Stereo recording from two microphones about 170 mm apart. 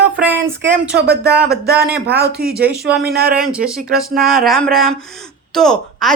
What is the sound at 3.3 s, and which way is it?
A man's voice, 5° right (ahead or behind).